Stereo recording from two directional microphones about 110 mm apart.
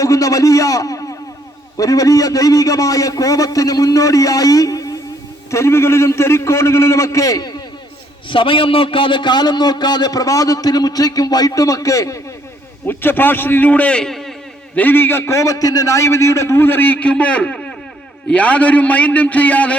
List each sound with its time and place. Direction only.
0.0 s a man's voice: 30° left (ahead or behind)
8.3 s a man's voice: 50° left (ahead or behind); by 12.2 s 30° left (ahead or behind)
12.9 s a man's voice: 20° left (ahead or behind); by 14.3 s centre (ahead or behind)
14.8 s a man's voice: 20° left (ahead or behind)